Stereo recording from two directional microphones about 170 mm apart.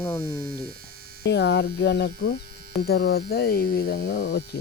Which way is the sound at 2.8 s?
70° left (ahead or behind).